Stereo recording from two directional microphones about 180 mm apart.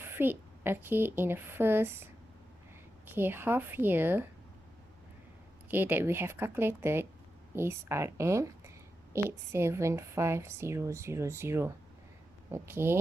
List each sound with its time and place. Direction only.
0.0 s a woman's voice: 10° right (ahead or behind)
3.2 s speech: 10° right (ahead or behind)
5.6 s speech: 10° right (ahead or behind)